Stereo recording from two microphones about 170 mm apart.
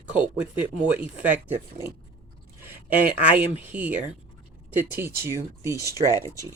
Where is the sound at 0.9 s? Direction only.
10° right (ahead or behind).